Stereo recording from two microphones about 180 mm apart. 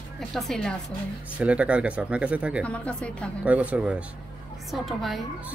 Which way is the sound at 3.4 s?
10° right (ahead or behind).